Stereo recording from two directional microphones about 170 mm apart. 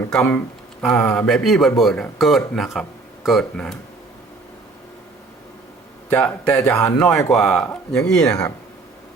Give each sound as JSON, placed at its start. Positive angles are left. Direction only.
{"t": 0.1, "sound": "speech", "side_deg": 5}
{"t": 6.1, "sound": "speech", "side_deg": 5}
{"t": 8.3, "sound": "speech", "side_deg": 20}